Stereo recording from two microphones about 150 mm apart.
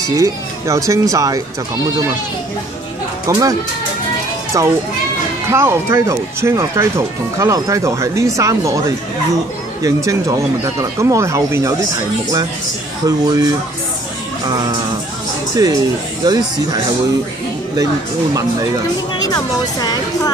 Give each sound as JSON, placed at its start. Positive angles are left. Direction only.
{"t": 0.1, "sound": "speech", "side_deg": -20}
{"t": 3.3, "sound": "speech", "side_deg": -25}
{"t": 4.6, "sound": "speech", "side_deg": -20}
{"t": 13.0, "sound": "speech", "side_deg": -25}
{"t": 15.5, "sound": "speech", "side_deg": -25}
{"t": 19.2, "sound": "speech", "side_deg": 25}